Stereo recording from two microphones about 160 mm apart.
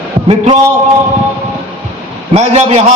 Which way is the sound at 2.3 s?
40° right (ahead or behind).